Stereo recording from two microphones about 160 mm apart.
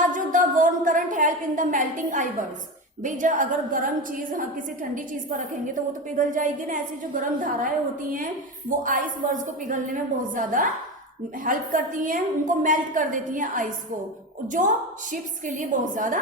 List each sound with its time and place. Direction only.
0.1 s a sound: 55° right (ahead or behind)
3.0 s a woman's voice: 55° right (ahead or behind)
6.1 s a woman's voice: 55° right (ahead or behind)
8.7 s a woman's voice: 55° right (ahead or behind)